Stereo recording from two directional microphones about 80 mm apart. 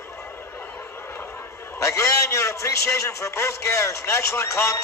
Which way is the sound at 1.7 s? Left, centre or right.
Left.